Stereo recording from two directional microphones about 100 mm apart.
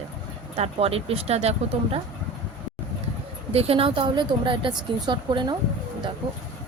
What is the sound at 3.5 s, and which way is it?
A woman's voice, 85° right.